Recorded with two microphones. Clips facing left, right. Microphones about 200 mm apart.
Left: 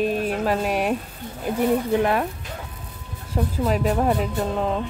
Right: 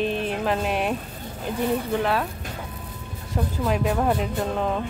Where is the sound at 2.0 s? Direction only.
15° left (ahead or behind).